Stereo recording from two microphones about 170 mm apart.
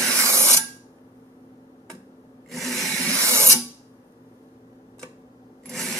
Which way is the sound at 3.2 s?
15° right (ahead or behind).